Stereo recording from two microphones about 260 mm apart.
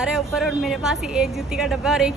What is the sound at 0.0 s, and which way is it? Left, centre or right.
A woman's voice, centre.